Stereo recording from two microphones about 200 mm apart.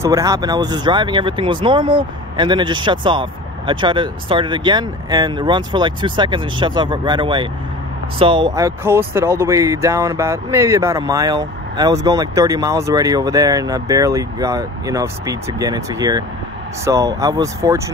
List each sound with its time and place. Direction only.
0.0 s speech: 15° right (ahead or behind)